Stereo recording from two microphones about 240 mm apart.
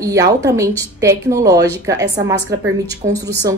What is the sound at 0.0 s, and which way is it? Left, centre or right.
Speech, centre.